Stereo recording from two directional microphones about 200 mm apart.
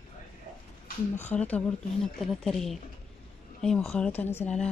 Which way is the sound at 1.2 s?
10° left (ahead or behind).